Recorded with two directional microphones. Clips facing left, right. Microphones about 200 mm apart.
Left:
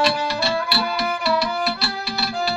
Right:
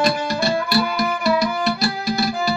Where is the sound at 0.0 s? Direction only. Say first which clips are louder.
Right 2 dB; 45° right (ahead or behind).